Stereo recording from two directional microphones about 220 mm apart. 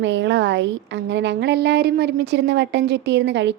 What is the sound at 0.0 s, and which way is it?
A woman's voice, 55° right (ahead or behind).